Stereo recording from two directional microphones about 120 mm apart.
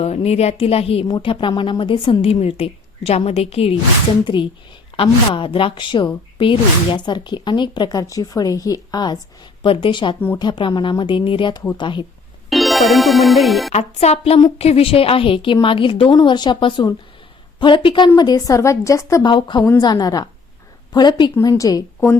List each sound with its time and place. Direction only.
0.0 s a woman's voice: 60° left (ahead or behind)
1.0 s a woman's voice: 35° left (ahead or behind); by 3.8 s 55° left (ahead or behind)
4.9 s a woman's voice: 45° left (ahead or behind)
12.5 s music: centre (ahead or behind)
13.7 s a woman's voice: 65° left (ahead or behind); by 19.2 s 25° left (ahead or behind)
19.2 s a woman's voice: 40° left (ahead or behind)